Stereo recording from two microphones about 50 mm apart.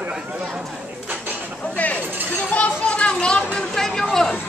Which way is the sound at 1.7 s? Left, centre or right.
Left.